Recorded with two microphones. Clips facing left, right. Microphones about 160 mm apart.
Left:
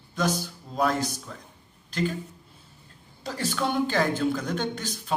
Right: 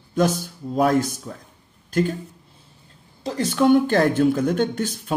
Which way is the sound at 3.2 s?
35° right (ahead or behind).